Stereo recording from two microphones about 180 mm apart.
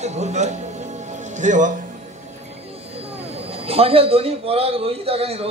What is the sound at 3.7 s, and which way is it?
A man's voice, 35° right (ahead or behind).